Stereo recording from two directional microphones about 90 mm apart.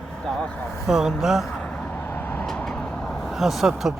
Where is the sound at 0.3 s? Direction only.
10° left (ahead or behind).